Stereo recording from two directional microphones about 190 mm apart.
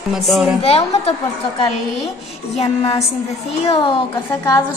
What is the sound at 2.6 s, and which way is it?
A woman's voice, 30° left (ahead or behind).